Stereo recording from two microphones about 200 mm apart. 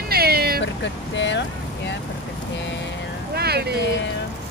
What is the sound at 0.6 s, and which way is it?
Speech, 65° left (ahead or behind).